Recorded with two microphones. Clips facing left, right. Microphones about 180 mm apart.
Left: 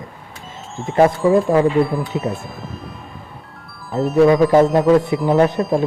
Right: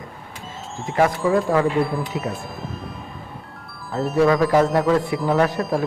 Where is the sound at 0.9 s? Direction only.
30° left (ahead or behind).